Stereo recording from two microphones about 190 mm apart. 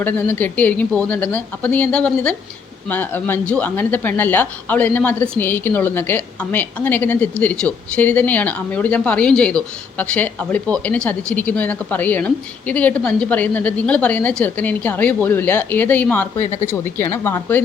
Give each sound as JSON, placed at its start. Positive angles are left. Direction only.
{"t": 0.0, "sound": "speech", "side_deg": 10}
{"t": 16.4, "sound": "speech", "side_deg": 35}
{"t": 16.6, "sound": "speech", "side_deg": 10}